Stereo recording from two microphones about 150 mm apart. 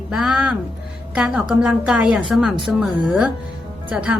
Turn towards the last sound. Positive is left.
turn(degrees=-10)  # may be behind; listen again after turning